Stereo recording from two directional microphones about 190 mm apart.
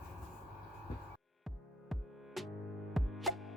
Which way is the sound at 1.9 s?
Centre (ahead or behind).